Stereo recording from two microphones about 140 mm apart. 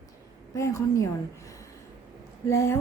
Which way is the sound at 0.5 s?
20° left (ahead or behind).